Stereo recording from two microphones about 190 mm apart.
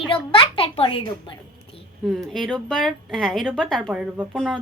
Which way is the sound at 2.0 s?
Centre (ahead or behind).